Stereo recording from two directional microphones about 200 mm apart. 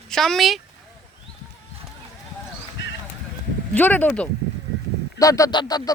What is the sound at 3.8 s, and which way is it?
Speech, 10° left (ahead or behind).